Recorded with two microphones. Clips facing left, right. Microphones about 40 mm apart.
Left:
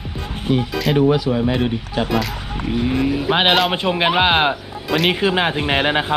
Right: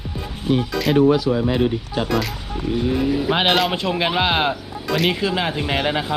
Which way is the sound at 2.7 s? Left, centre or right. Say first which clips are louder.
Even; left.